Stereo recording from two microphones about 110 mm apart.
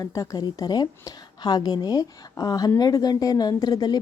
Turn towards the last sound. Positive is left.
turn(degrees=35)  # may be behind; listen again after turning